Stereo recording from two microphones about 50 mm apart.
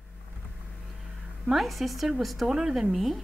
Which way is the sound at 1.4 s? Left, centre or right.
Centre.